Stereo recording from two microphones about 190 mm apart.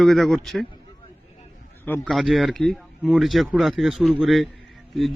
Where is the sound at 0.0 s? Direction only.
Centre (ahead or behind).